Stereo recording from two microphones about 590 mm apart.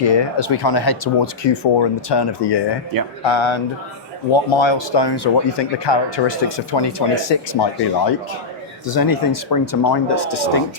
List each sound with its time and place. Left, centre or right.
0.0 s speech: left
2.9 s speech: right
3.2 s speech: left
8.9 s speech: left